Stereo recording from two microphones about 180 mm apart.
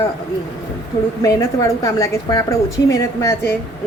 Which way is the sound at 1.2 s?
20° left (ahead or behind).